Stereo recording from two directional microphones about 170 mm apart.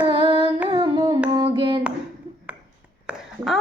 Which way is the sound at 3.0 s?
Centre (ahead or behind).